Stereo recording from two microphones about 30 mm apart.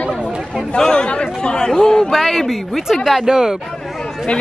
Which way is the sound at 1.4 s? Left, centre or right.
Left.